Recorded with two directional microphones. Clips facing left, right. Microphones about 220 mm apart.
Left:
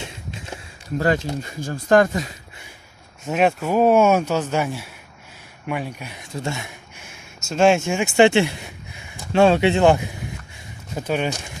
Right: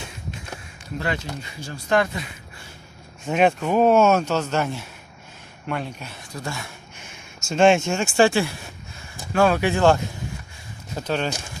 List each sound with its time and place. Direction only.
0.9 s speech: 45° left (ahead or behind)
3.3 s speech: 5° left (ahead or behind)
6.3 s speech: 25° left (ahead or behind)
7.4 s speech: 5° left (ahead or behind)